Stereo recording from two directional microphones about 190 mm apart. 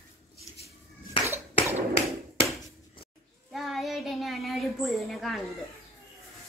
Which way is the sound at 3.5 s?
Centre (ahead or behind).